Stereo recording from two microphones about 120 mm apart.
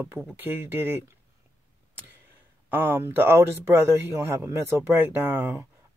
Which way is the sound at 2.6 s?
15° right (ahead or behind).